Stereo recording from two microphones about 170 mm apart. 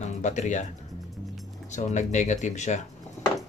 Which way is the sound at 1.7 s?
45° left (ahead or behind).